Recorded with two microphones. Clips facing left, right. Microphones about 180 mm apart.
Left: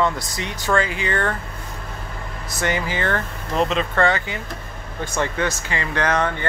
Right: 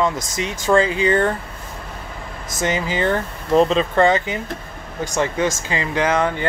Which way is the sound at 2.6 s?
20° right (ahead or behind).